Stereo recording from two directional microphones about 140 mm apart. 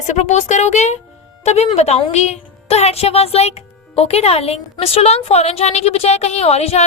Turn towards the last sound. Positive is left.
turn(degrees=50)  # may be behind; listen again after turning